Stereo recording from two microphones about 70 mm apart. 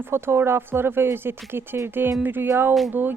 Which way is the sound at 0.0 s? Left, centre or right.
Right.